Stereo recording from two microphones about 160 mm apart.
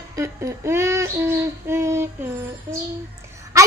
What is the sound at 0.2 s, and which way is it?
A child's voice, 15° right (ahead or behind).